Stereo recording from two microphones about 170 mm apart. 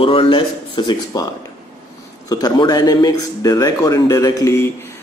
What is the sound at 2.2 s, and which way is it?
Speech, 20° left (ahead or behind).